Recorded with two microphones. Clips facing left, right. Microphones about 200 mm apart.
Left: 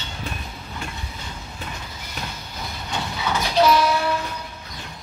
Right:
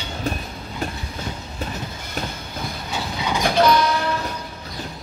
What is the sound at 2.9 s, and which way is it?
Train, 15° right (ahead or behind).